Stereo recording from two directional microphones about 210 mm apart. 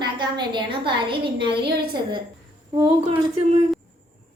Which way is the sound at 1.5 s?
50° right (ahead or behind).